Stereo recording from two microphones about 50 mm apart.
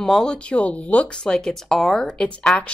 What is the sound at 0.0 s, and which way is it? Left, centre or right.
Speech, centre.